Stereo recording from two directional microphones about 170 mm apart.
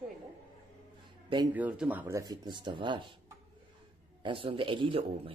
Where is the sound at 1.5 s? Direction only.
10° right (ahead or behind); by 3.1 s 30° right (ahead or behind).